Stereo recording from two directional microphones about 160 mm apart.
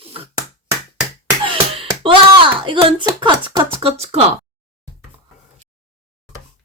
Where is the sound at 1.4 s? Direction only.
35° right (ahead or behind).